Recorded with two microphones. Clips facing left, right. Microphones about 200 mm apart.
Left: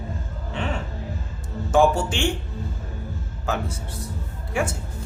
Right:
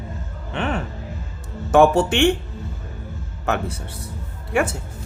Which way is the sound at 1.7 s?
65° right (ahead or behind).